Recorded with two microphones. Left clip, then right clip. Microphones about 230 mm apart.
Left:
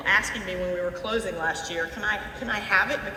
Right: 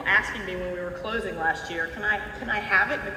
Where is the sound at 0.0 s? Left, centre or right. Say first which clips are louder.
Even; left.